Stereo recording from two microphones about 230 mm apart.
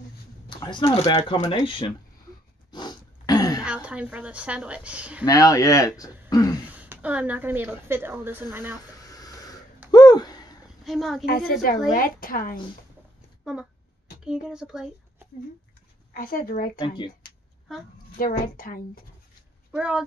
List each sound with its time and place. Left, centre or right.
0.5 s speech: centre
2.7 s throat clearing: centre
3.6 s a woman's voice: centre
5.2 s speech: centre
6.6 s speech: centre
8.9 s a sound: centre
10.8 s a woman's voice: centre
11.9 s speech: left
13.4 s a sound: centre
14.2 s speech: centre
16.1 s speech: left
16.8 s speech: left
18.1 s speech: left
19.7 s a woman's voice: centre